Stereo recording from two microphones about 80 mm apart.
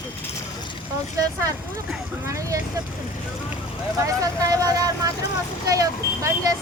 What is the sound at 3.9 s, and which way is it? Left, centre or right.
Speech, right.